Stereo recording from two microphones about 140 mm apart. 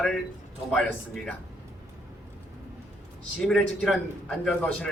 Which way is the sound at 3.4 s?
Centre (ahead or behind).